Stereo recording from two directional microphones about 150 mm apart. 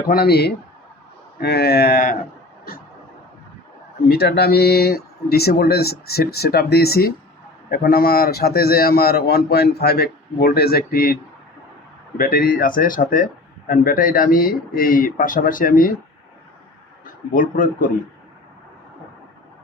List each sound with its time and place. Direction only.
0.1 s a man's voice: 90° left
4.1 s a man's voice: 90° left; by 15.9 s 65° left (ahead or behind)
17.3 s speech: 65° left (ahead or behind)